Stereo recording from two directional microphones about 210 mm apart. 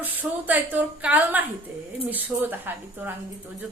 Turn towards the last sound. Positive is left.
turn(degrees=-10)  # may be behind; listen again after turning